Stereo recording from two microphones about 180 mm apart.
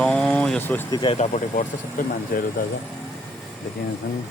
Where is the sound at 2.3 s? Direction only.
55° left (ahead or behind).